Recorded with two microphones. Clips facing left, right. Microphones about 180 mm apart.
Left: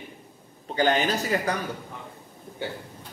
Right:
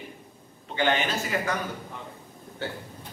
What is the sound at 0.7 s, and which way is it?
Speech, 40° left (ahead or behind).